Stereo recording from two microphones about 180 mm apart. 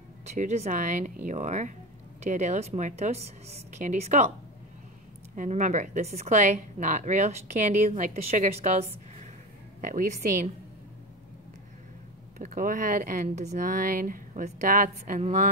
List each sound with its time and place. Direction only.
0.4 s a woman's voice: 40° right (ahead or behind)
5.3 s a woman's voice: 45° right (ahead or behind)
9.8 s speech: 50° right (ahead or behind)
12.4 s speech: 50° right (ahead or behind)